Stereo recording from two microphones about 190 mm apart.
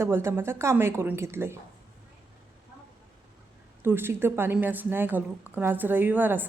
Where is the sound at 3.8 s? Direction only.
10° right (ahead or behind).